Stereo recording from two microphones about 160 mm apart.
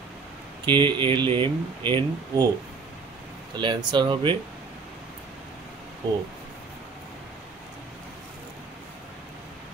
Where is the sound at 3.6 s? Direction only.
30° right (ahead or behind).